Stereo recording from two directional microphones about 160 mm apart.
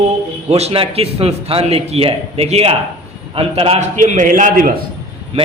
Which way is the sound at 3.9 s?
50° right (ahead or behind).